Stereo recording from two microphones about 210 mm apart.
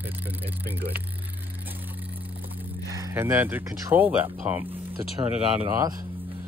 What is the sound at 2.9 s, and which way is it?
Speech, 15° right (ahead or behind).